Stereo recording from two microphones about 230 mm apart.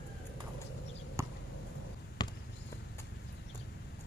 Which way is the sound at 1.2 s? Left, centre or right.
Centre.